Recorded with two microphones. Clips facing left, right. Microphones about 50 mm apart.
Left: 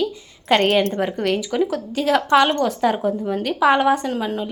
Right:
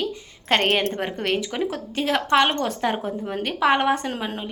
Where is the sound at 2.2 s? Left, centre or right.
Centre.